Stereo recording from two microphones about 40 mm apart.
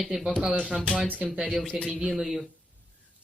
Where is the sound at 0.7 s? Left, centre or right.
Right.